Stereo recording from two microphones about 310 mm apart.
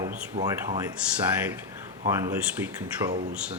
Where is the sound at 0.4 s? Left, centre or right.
Centre.